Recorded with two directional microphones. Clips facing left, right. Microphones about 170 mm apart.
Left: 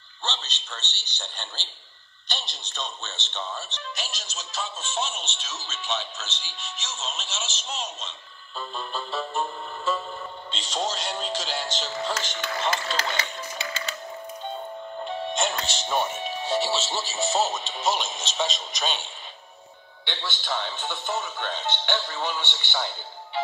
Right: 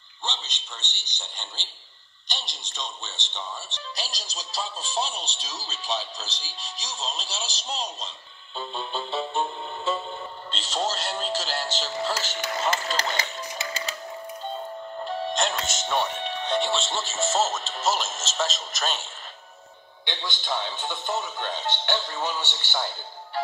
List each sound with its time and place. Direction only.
0.5 s speech: 15° right (ahead or behind)
3.9 s speech: 35° right (ahead or behind)
8.7 s speech: centre (ahead or behind)
9.3 s music: centre (ahead or behind)
13.1 s music: 40° right (ahead or behind)
15.0 s music: centre (ahead or behind)
15.6 s speech: 35° left (ahead or behind)
15.9 s speech: 10° left (ahead or behind)
20.5 s speech: 10° right (ahead or behind)